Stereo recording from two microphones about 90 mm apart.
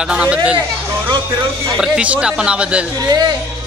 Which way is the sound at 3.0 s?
45° right (ahead or behind).